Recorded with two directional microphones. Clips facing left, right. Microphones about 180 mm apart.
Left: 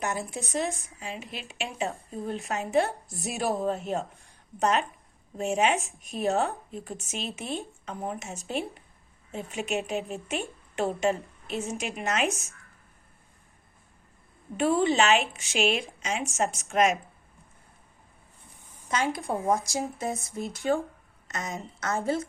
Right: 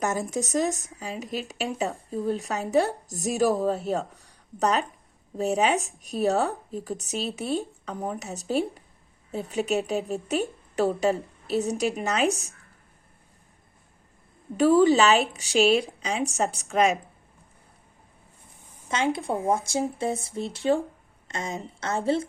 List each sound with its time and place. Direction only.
0.0 s speech: 40° right (ahead or behind)
14.5 s speech: 40° right (ahead or behind)
18.9 s a woman's voice: 25° right (ahead or behind)